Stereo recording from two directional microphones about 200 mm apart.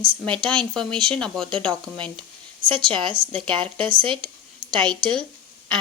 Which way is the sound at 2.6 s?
25° right (ahead or behind).